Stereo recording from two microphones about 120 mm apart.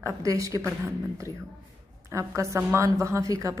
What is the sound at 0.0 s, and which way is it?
A woman's voice, 30° right (ahead or behind).